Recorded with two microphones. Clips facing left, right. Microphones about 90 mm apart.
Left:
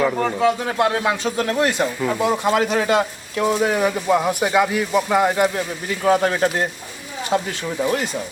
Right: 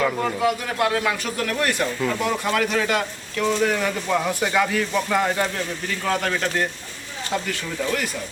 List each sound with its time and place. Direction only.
0.0 s a man's voice: 15° left (ahead or behind)
0.4 s speech: 25° left (ahead or behind)